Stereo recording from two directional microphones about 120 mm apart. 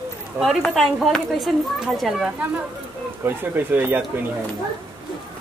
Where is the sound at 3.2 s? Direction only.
15° right (ahead or behind).